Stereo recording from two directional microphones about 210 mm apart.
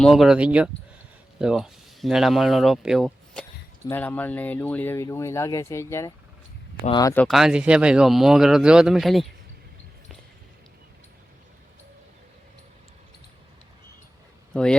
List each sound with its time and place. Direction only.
0.0 s speech: centre (ahead or behind); by 7.1 s 20° left (ahead or behind)
7.1 s speech: 5° left (ahead or behind)
14.5 s speech: 5° left (ahead or behind)